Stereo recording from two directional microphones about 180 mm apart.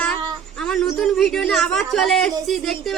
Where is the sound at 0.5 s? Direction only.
5° left (ahead or behind).